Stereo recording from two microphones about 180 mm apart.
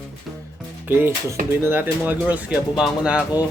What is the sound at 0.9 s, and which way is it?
Speech, 10° right (ahead or behind).